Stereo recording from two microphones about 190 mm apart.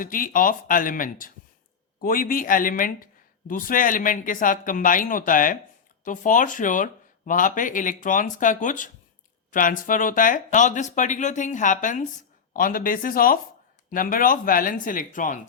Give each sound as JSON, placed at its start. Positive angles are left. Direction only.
{"t": 0.0, "sound": "speech", "side_deg": 45}